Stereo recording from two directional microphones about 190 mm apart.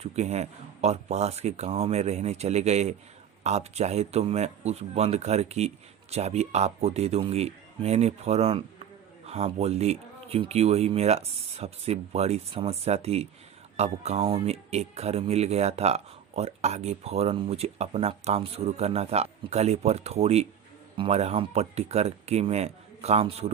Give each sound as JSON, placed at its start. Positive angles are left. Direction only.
{"t": 0.0, "sound": "speech", "side_deg": -35}